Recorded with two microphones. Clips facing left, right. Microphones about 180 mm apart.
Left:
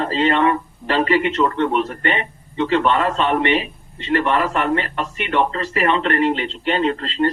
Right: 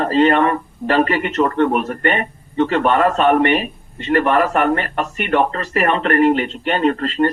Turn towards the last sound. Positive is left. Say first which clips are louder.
# right 3 dB
turn(degrees=-45)  # may be behind; listen again after turning